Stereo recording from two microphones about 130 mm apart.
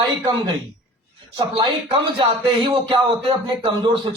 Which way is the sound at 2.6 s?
40° right (ahead or behind).